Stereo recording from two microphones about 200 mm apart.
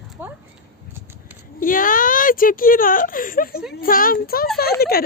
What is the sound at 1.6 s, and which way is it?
Speech, 45° left (ahead or behind).